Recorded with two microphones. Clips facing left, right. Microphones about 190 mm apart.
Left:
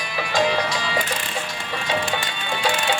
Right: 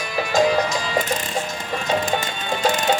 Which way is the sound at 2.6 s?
40° right (ahead or behind).